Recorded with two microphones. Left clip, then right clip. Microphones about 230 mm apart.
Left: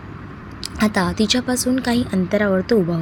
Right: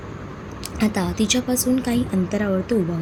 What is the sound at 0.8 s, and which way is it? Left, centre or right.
A woman's voice, left.